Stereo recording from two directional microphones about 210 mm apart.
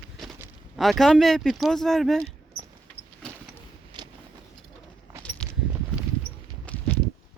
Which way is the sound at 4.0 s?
20° right (ahead or behind).